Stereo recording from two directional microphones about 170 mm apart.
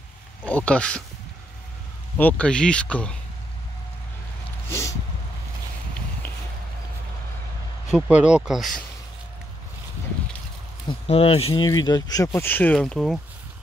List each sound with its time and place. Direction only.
0.5 s speech: 10° left (ahead or behind)
2.1 s speech: 10° left (ahead or behind)
4.6 s a sound: 15° left (ahead or behind)
7.9 s speech: 5° right (ahead or behind)
10.9 s speech: 35° left (ahead or behind); by 13.2 s 5° left (ahead or behind)